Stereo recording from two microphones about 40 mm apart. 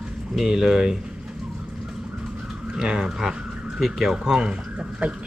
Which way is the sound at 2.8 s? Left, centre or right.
Centre.